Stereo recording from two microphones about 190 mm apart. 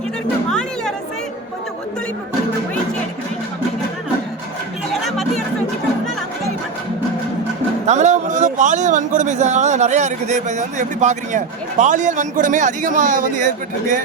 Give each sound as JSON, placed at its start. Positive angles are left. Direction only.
{"t": 5.0, "sound": "chatter", "side_deg": 0}
{"t": 7.9, "sound": "speech", "side_deg": -35}